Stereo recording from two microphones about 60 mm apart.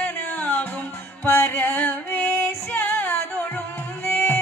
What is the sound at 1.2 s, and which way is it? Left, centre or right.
Music, left.